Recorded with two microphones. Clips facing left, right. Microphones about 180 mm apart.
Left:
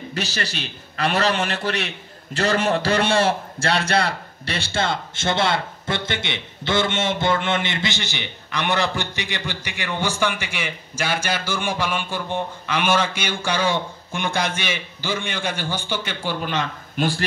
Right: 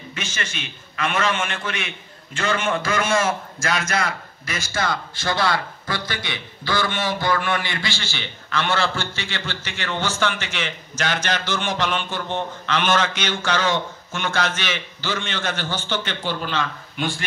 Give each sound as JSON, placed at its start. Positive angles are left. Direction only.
{"t": 0.1, "sound": "a man's voice", "side_deg": 35}